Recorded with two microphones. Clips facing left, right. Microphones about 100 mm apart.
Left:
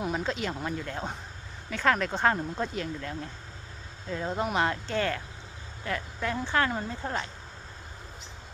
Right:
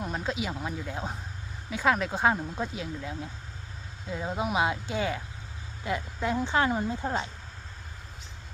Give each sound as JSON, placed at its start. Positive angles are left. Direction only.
{"t": 0.0, "sound": "speech", "side_deg": 0}